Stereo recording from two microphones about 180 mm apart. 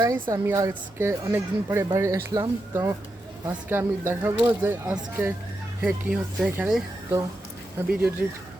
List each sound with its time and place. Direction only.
0.0 s a woman's voice: 20° right (ahead or behind)